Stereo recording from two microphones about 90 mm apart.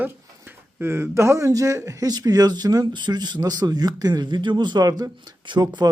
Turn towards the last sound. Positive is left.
turn(degrees=-55)  # may be behind; listen again after turning